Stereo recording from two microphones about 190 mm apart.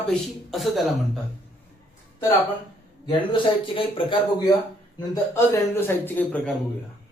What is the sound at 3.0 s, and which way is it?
Speech, 25° left (ahead or behind).